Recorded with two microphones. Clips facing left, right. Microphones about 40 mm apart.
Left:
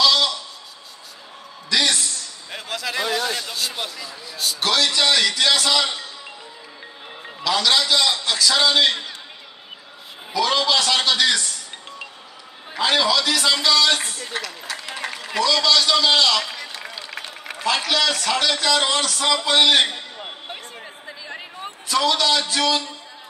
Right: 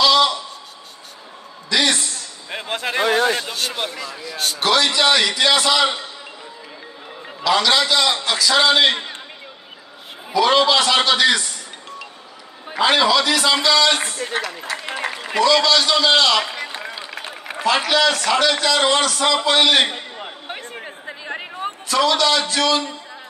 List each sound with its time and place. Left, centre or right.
0.0 s a sound: centre
1.7 s a sound: centre
2.5 s speech: right
4.6 s a man's voice: centre
7.4 s a man's voice: centre
10.4 s a man's voice: right
12.7 s a man's voice: centre
14.3 s speech: right
15.0 s a sound: centre
15.6 s a man's voice: centre
16.6 s run: centre
17.2 s a man's voice: centre
20.4 s a sound: right
21.8 s a man's voice: centre